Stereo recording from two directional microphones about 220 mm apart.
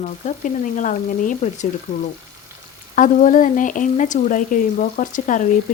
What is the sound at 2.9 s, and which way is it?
Speech, 35° left (ahead or behind).